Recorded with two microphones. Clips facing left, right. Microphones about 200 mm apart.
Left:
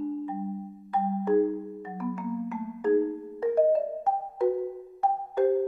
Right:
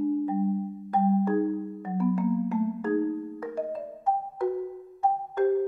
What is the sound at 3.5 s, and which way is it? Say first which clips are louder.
Music: left 14 dB; 55° left (ahead or behind).